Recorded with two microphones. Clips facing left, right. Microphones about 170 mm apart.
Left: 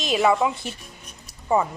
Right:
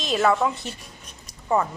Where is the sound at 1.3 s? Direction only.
10° left (ahead or behind).